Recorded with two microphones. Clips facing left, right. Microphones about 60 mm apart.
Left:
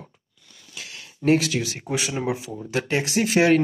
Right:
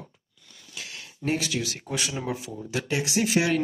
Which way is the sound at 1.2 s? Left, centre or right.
Left.